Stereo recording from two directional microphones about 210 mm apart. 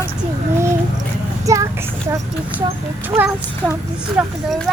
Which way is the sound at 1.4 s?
15° right (ahead or behind).